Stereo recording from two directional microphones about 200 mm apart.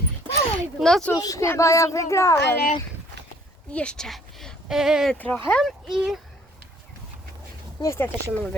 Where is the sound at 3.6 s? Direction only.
5° left (ahead or behind).